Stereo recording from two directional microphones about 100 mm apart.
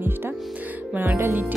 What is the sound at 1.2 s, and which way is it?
Speech, 20° right (ahead or behind).